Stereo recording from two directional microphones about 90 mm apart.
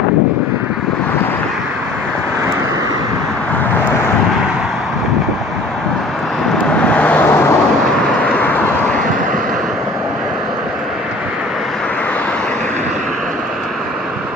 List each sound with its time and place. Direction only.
6.8 s vehicle: 15° left (ahead or behind)
8.3 s vehicle: 20° left (ahead or behind)